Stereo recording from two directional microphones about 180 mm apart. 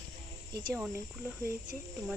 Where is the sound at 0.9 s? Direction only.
5° right (ahead or behind).